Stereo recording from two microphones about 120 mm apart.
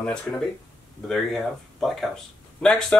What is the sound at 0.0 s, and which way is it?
Speech, 5° left (ahead or behind).